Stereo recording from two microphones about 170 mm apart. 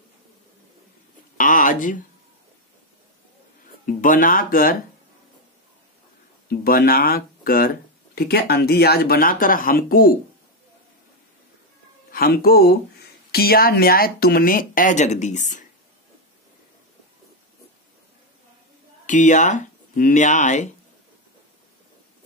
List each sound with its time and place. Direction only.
1.4 s a sound: 50° left (ahead or behind)
3.8 s speech: 55° left (ahead or behind)
6.5 s speech: 65° left (ahead or behind)
12.1 s speech: 60° left (ahead or behind); by 15.6 s 45° left (ahead or behind)
19.0 s speech: 45° left (ahead or behind)